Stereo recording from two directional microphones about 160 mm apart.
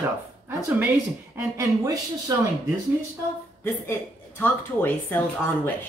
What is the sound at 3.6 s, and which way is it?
Speech, 10° left (ahead or behind).